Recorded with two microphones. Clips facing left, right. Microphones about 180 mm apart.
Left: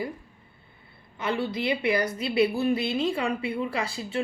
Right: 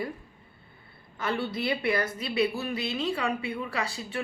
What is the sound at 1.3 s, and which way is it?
A woman's voice, 20° left (ahead or behind).